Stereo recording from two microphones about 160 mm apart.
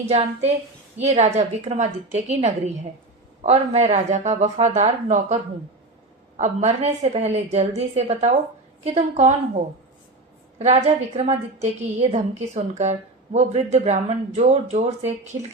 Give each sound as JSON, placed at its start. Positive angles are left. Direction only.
{"t": 0.1, "sound": "a woman's voice", "side_deg": -45}
{"t": 10.6, "sound": "a woman's voice", "side_deg": -40}